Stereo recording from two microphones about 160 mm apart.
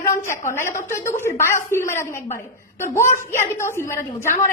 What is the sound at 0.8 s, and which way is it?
A woman's voice, 15° left (ahead or behind).